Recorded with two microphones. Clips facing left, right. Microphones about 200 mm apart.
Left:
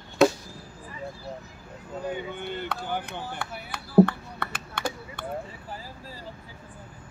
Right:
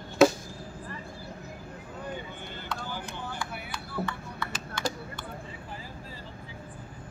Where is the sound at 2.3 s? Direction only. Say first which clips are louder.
Left 6 dB; 60° left (ahead or behind).